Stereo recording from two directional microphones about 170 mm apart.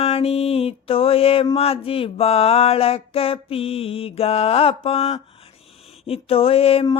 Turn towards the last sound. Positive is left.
turn(degrees=35)  # may be behind; listen again after turning